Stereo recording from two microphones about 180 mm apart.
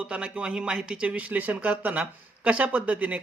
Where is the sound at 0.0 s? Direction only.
5° right (ahead or behind).